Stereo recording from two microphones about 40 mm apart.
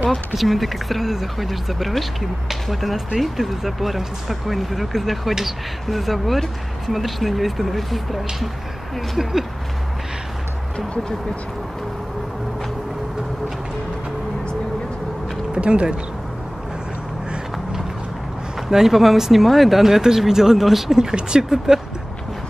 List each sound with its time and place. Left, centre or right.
0.3 s speech: centre
9.2 s speech: centre
15.5 s speech: right
18.7 s speech: centre